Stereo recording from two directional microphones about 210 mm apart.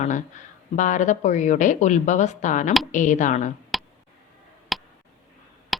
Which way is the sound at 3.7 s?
Centre (ahead or behind).